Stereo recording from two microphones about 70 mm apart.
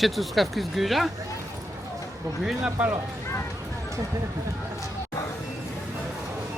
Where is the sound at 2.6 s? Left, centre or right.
Right.